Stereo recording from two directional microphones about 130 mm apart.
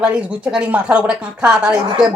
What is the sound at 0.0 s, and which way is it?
Speech, 10° right (ahead or behind).